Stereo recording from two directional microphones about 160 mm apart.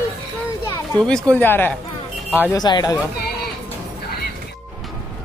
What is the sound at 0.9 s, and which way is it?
Speech, 5° left (ahead or behind).